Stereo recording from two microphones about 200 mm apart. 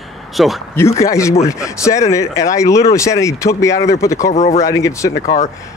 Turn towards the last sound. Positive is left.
turn(degrees=35)  # may be behind; listen again after turning